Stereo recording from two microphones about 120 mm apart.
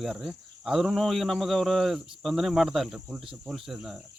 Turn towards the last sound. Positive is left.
turn(degrees=-5)  # may be behind; listen again after turning